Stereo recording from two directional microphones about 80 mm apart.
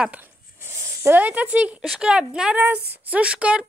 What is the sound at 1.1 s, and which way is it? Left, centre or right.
Speech, centre.